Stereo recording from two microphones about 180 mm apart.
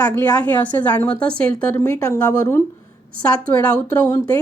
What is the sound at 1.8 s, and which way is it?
Speech, 15° left (ahead or behind).